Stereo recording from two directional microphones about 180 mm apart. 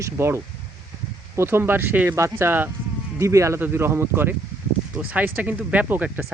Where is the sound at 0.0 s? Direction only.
15° right (ahead or behind).